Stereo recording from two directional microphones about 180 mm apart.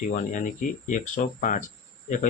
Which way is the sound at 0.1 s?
45° left (ahead or behind).